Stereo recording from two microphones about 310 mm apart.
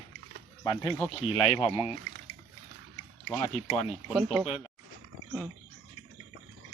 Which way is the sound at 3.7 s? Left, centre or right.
Centre.